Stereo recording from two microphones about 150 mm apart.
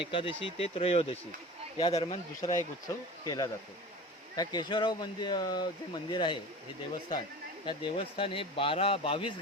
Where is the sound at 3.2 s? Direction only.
25° left (ahead or behind).